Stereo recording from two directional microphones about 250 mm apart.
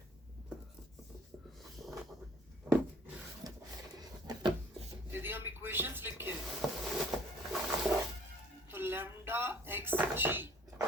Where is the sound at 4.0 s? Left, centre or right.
Centre.